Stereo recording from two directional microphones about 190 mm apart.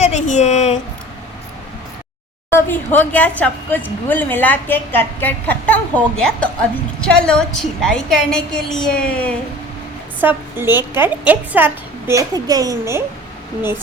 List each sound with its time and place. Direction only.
0.0 s speech: 35° left (ahead or behind)
2.5 s a woman's voice: 10° left (ahead or behind)
10.2 s a woman's voice: 10° right (ahead or behind)